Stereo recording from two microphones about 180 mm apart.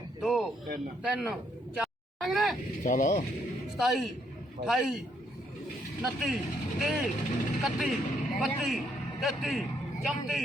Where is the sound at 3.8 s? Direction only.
Centre (ahead or behind).